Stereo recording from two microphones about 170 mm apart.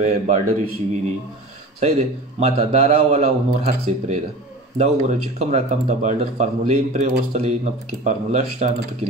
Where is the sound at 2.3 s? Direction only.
40° right (ahead or behind).